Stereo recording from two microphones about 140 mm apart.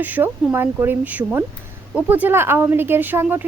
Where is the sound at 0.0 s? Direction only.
15° right (ahead or behind).